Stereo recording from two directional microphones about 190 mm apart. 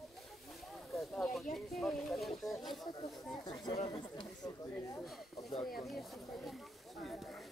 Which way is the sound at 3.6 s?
25° left (ahead or behind).